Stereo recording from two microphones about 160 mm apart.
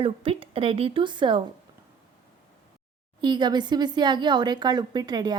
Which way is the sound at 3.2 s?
30° right (ahead or behind).